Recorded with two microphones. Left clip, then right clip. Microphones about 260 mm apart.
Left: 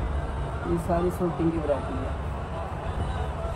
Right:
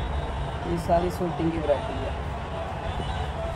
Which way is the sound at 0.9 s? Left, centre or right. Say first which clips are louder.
Right 5 dB; right.